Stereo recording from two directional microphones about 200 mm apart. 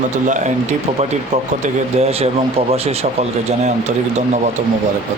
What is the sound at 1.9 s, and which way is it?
A man's voice, 30° right (ahead or behind).